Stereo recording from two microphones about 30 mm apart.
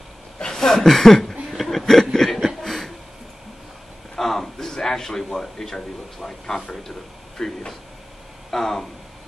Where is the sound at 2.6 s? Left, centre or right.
Centre.